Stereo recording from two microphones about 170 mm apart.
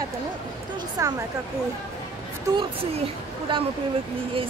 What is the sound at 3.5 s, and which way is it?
Speech, 30° right (ahead or behind).